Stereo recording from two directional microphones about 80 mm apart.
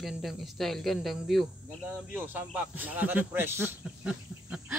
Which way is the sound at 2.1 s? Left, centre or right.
Right.